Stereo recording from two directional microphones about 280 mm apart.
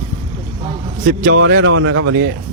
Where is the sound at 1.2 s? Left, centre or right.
Right.